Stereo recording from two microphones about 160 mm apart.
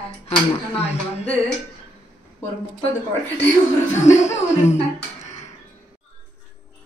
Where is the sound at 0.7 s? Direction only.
40° left (ahead or behind).